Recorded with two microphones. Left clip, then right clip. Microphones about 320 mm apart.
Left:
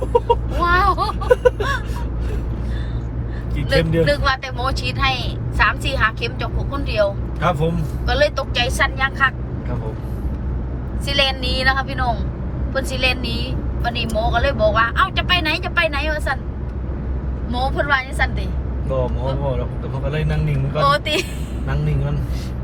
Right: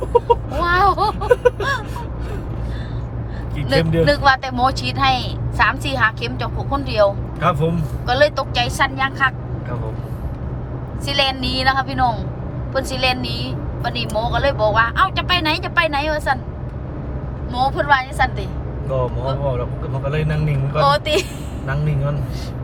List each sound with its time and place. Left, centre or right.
0.1 s a sound: right
0.6 s a sound: centre
3.7 s speech: centre
11.0 s a woman's voice: centre
17.5 s speech: centre
20.7 s speech: centre